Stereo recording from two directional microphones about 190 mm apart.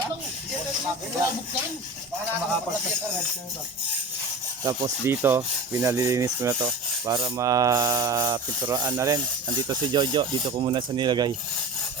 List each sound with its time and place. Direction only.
4.6 s rub: 20° right (ahead or behind)